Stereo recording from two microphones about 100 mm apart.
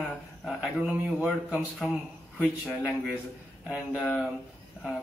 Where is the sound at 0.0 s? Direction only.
5° right (ahead or behind).